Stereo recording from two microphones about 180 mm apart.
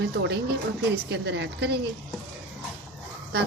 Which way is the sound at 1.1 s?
75° right (ahead or behind).